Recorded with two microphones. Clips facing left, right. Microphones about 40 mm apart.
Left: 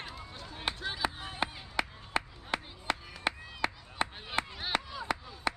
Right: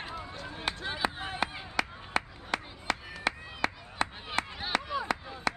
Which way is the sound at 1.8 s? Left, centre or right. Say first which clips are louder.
Right 2 dB; centre.